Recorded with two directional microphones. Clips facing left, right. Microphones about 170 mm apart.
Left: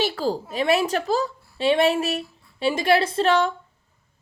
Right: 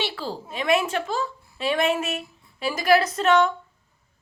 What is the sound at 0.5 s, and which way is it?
A woman's voice, 35° left (ahead or behind).